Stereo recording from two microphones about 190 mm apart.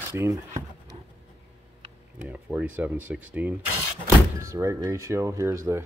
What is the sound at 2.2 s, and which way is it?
Speech, 5° right (ahead or behind).